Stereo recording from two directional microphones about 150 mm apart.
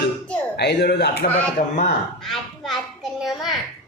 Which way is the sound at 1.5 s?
55° left (ahead or behind).